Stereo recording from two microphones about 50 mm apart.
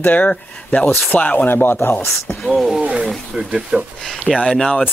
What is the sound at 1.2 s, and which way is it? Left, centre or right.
Speech, left.